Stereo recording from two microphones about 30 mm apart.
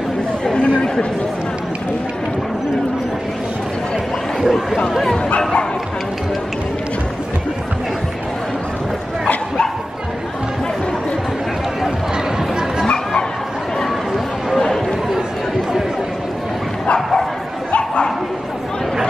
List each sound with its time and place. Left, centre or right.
0.6 s chatter: left
4.4 s speech: centre
12.8 s bow-wow: left
14.6 s chatter: centre